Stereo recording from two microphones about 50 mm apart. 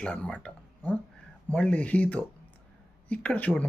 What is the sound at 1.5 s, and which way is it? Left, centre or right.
Speech, left.